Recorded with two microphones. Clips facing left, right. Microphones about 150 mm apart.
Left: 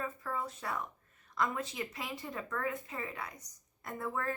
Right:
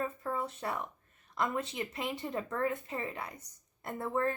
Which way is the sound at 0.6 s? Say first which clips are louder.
Right 3 dB; 35° right (ahead or behind).